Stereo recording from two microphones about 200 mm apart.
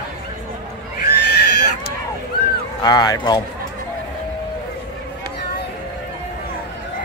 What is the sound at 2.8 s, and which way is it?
Speech, 20° left (ahead or behind).